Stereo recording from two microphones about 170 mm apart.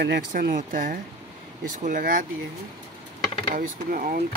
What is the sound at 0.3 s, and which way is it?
Speech, 50° right (ahead or behind).